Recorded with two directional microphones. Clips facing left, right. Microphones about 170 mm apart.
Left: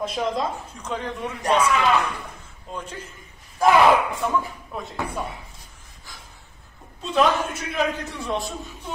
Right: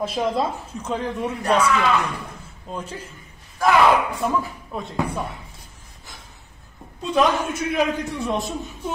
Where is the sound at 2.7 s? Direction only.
10° right (ahead or behind).